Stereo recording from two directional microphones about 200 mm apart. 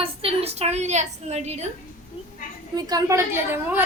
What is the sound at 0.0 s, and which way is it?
A woman's voice, 30° right (ahead or behind).